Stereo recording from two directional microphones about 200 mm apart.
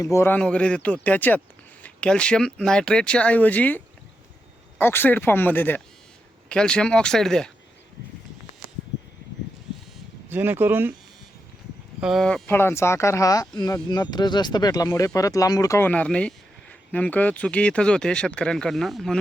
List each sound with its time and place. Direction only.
0.0 s speech: 15° left (ahead or behind)
10.2 s speech: 10° right (ahead or behind)
11.9 s speech: centre (ahead or behind)